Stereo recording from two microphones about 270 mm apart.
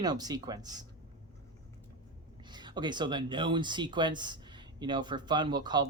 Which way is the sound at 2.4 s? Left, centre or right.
Centre.